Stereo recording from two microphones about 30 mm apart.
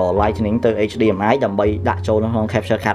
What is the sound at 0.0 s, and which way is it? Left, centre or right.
Speech, centre.